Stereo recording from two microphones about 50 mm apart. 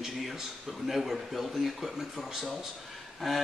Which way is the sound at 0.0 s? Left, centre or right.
Centre.